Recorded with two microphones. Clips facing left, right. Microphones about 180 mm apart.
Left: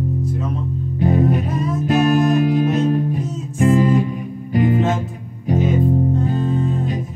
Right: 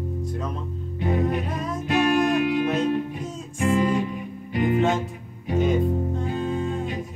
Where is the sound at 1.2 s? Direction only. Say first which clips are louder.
Left 6 dB; 5° left (ahead or behind).